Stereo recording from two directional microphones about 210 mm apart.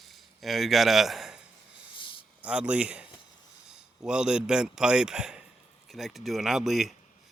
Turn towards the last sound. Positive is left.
turn(degrees=0)  # may be behind; listen again after turning